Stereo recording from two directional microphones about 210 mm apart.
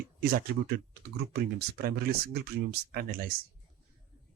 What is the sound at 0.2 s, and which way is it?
Speech, 45° right (ahead or behind).